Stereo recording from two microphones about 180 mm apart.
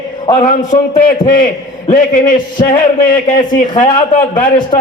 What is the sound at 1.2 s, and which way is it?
Speech, 50° left (ahead or behind).